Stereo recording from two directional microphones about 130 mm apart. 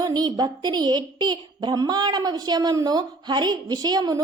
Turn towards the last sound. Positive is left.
turn(degrees=-30)  # may be behind; listen again after turning